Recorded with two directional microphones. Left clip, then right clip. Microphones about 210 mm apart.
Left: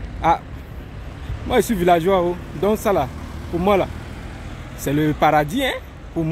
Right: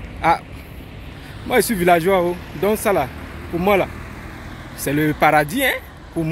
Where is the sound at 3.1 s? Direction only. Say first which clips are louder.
Right 2 dB; 55° left (ahead or behind).